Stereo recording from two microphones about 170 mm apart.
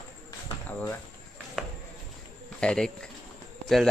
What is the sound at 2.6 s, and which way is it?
Speech, 5° left (ahead or behind).